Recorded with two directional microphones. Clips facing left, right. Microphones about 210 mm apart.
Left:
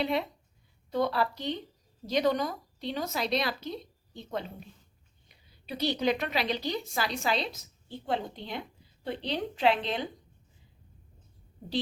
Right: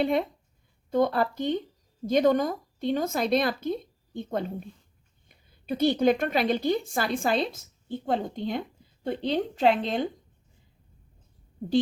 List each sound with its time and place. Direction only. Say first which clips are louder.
0.0 s a woman's voice: right 5 dB; 50° right (ahead or behind)